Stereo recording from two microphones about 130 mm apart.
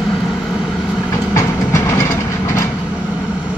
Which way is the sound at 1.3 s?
20° left (ahead or behind).